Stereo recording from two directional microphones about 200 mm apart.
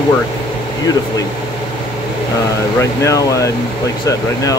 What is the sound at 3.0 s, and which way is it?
Speech, 15° left (ahead or behind).